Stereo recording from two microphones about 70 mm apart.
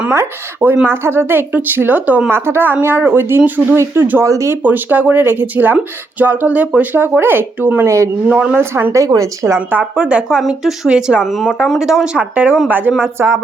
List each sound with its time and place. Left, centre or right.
0.9 s speech: right
2.3 s speech: right
4.2 s speech: right
4.6 s speech: right
7.9 s speech: right
8.3 s speech: centre
8.5 s speech: right
9.6 s speech: centre
10.2 s a woman's voice: centre
10.8 s a woman's voice: centre
12.1 s speech: centre
13.0 s speech: right